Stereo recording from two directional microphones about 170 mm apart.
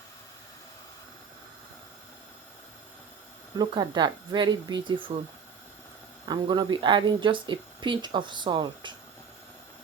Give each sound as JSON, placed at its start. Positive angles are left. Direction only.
{"t": 3.6, "sound": "speech", "side_deg": -25}
{"t": 6.2, "sound": "speech", "side_deg": -25}